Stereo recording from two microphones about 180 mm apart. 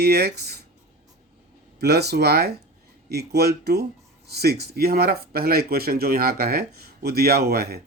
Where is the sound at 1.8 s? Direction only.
65° right (ahead or behind).